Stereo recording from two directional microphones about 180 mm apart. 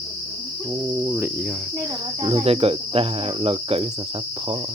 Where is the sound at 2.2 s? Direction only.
30° right (ahead or behind).